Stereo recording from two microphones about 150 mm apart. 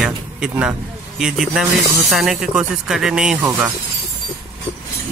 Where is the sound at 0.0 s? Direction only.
5° right (ahead or behind).